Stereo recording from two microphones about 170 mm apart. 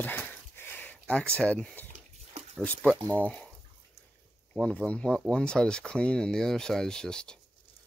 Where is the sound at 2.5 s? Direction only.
10° left (ahead or behind).